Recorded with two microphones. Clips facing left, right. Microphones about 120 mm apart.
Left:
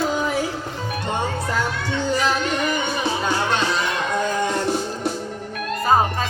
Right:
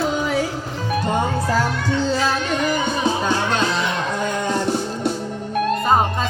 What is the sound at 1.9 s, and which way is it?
Music, 15° left (ahead or behind).